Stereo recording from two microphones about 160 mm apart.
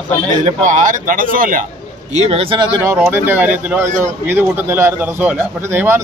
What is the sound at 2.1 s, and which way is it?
Speech, 40° right (ahead or behind).